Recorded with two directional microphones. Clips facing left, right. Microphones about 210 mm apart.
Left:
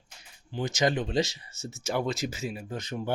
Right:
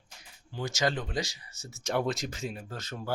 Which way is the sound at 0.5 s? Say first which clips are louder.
Left 4 dB; 20° left (ahead or behind).